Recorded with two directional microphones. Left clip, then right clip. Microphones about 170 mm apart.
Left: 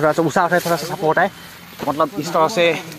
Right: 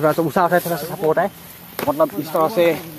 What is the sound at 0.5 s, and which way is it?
Speech, 30° left (ahead or behind).